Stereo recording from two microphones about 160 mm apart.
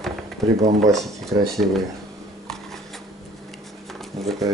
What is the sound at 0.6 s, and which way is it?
Speech, 45° right (ahead or behind).